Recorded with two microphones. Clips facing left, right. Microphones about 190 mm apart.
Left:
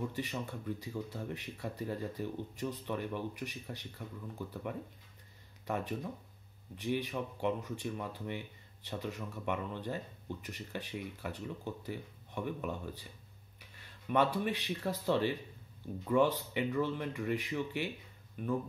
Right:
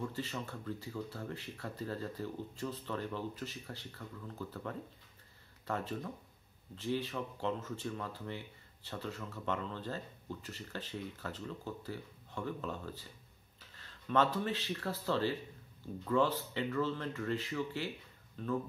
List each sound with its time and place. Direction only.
0.0 s speech: 15° left (ahead or behind)